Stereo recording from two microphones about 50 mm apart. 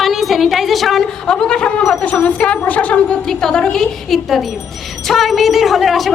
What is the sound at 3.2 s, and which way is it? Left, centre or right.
Speech, centre.